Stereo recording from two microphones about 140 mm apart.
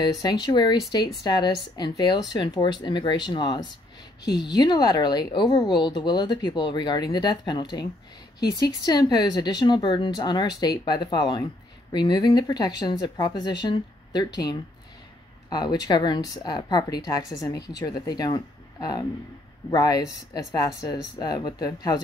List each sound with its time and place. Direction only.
0.0 s a woman's voice: 30° left (ahead or behind)